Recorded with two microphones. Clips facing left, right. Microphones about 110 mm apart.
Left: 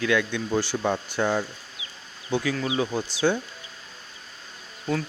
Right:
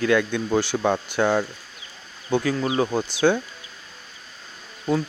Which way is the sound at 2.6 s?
45° right (ahead or behind).